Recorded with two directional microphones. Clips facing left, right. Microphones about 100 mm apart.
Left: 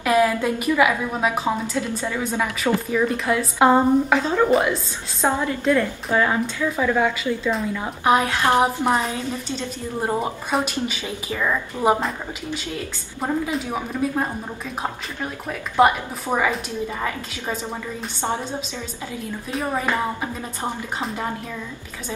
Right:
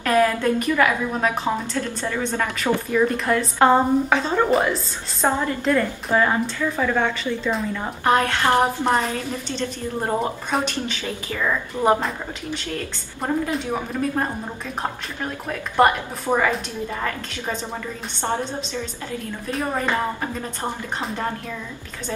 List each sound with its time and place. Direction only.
0.0 s a woman's voice: 10° left (ahead or behind)
15.4 s a woman's voice: 5° left (ahead or behind)
18.2 s a woman's voice: 15° left (ahead or behind)
19.5 s a woman's voice: centre (ahead or behind)
19.8 s a woman's voice: 10° left (ahead or behind)